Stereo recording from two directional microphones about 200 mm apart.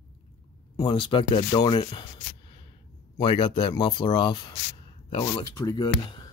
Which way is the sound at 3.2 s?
25° left (ahead or behind).